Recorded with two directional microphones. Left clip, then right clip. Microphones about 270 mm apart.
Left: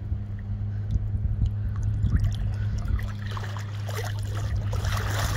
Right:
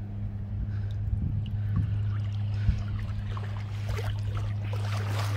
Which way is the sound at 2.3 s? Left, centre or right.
Left.